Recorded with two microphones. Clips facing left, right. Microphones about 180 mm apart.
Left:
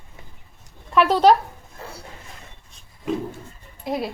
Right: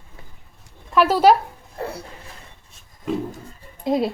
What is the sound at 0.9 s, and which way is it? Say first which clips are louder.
Speech: right 1 dB; 5° right (ahead or behind).